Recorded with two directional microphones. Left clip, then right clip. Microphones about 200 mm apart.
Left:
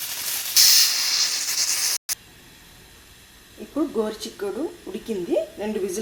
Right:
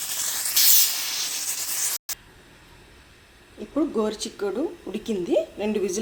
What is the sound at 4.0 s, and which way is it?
Speech, 20° right (ahead or behind).